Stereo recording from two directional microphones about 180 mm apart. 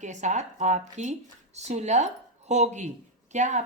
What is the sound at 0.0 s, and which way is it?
Speech, 40° right (ahead or behind).